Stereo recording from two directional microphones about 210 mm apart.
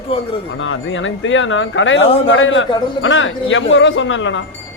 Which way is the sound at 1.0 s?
65° left (ahead or behind).